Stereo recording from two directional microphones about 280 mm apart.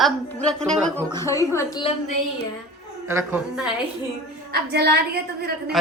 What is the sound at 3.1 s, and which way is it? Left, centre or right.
Speech, centre.